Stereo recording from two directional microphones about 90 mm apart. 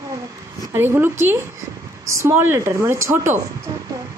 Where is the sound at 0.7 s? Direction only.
25° right (ahead or behind).